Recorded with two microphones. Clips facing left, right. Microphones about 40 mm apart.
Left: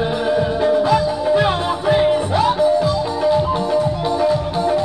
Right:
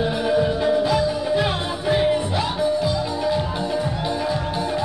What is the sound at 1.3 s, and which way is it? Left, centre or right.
Music, centre.